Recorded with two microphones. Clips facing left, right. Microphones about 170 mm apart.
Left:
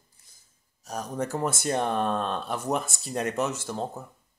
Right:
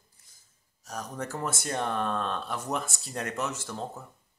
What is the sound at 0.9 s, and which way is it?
Speech, 25° left (ahead or behind).